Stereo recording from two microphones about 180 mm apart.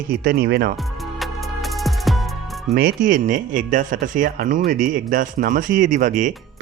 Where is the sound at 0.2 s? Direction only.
65° right (ahead or behind).